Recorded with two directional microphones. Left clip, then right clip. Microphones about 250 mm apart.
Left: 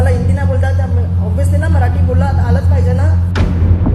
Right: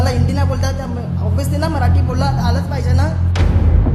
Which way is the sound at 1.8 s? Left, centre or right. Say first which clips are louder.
Left 1 dB; centre.